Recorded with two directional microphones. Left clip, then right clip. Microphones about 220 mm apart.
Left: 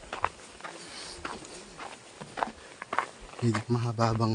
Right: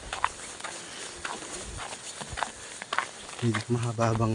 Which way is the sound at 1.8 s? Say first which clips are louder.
Right 2 dB; 60° right (ahead or behind).